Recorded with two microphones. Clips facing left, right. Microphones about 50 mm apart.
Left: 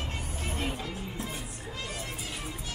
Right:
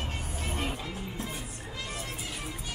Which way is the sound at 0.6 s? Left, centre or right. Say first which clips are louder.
Left 1 dB; centre.